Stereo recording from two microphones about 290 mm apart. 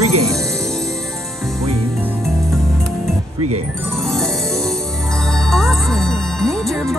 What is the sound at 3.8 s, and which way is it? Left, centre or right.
Music, centre.